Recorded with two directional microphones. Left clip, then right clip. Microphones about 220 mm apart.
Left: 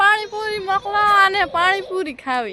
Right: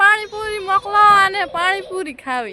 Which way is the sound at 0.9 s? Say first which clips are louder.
Right 6 dB; 35° right (ahead or behind).